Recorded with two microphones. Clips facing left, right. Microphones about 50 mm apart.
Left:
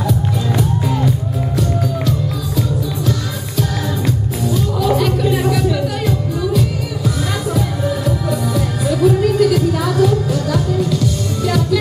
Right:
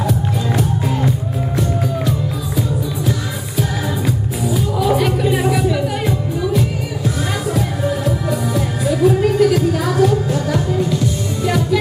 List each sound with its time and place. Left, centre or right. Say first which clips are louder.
0.6 s music: left 2 dB; right
4.7 s music: even; centre
8.3 s music: even; right